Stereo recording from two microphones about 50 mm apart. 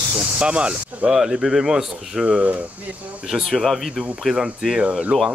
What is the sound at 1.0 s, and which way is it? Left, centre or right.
Speech, centre.